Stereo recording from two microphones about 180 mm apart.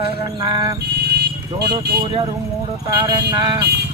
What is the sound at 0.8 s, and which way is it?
Vehicle, 65° right (ahead or behind).